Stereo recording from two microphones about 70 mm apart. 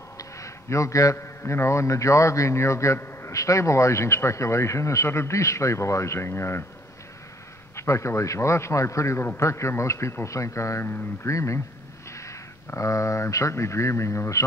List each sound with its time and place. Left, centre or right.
0.2 s a man's voice: left
7.7 s speech: left